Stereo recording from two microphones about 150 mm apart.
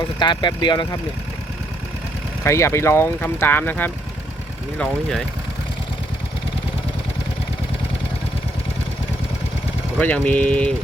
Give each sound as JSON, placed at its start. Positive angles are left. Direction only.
{"t": 0.2, "sound": "speech", "side_deg": 30}
{"t": 2.4, "sound": "speech", "side_deg": 20}
{"t": 10.0, "sound": "speech", "side_deg": 10}